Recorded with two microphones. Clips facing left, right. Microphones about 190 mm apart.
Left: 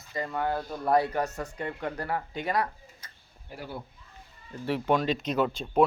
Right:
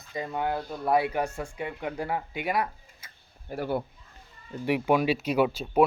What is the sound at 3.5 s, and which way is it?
Speech, 60° right (ahead or behind).